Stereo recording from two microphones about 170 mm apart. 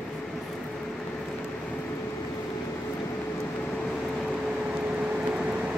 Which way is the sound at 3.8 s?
5° left (ahead or behind).